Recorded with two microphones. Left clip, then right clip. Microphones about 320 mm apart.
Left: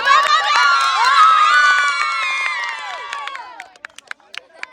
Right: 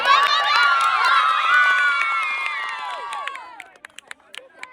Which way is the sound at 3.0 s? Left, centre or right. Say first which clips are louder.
Left 2 dB; left.